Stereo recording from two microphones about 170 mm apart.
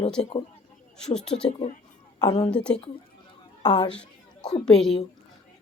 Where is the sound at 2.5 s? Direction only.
5° left (ahead or behind).